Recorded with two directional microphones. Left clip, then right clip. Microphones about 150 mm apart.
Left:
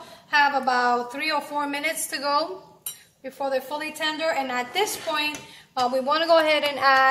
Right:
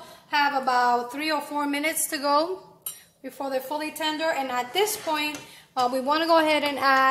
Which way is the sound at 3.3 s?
60° right (ahead or behind).